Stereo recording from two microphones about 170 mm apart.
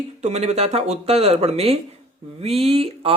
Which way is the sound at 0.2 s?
40° right (ahead or behind).